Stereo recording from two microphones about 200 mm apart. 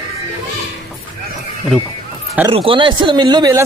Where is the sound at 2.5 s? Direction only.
25° right (ahead or behind).